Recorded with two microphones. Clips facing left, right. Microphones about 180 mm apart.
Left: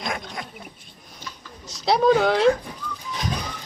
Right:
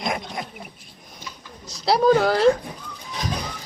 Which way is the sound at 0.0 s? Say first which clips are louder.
Right 3 dB; 20° right (ahead or behind).